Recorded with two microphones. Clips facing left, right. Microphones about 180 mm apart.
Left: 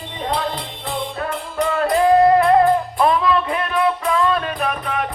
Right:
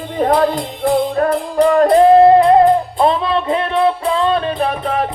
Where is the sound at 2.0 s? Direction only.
25° right (ahead or behind).